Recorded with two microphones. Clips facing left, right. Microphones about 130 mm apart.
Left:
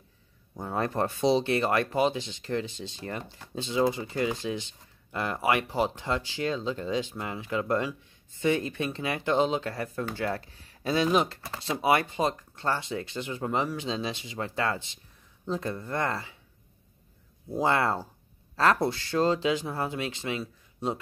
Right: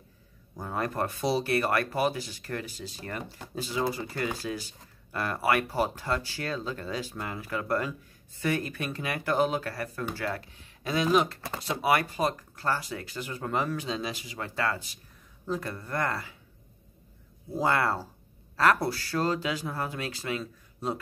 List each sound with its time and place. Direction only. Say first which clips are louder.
0.6 s speech: left 2 dB; 30° left (ahead or behind)
17.6 s speech: left 1 dB; 25° left (ahead or behind)